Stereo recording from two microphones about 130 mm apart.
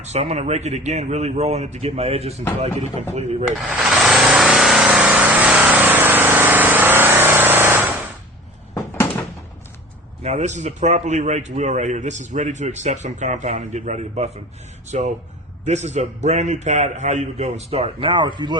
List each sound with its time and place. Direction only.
0.0 s a man's voice: 60° right (ahead or behind)
3.7 s vehicle: 5° right (ahead or behind)
10.2 s a man's voice: 65° right (ahead or behind)
17.7 s speech: 50° right (ahead or behind); by 18.5 s 35° right (ahead or behind)